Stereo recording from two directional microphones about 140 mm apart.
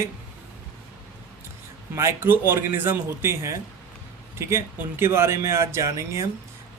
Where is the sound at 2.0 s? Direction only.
20° right (ahead or behind).